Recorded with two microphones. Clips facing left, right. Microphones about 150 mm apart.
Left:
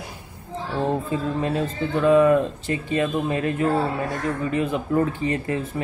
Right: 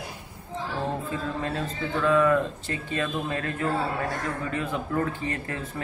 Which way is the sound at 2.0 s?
20° left (ahead or behind).